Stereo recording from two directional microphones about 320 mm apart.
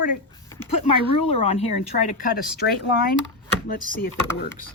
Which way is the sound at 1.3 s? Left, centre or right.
Centre.